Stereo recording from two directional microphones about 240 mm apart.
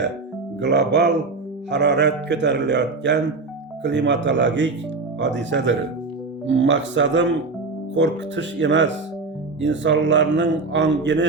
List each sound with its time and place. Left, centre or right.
0.6 s speech: right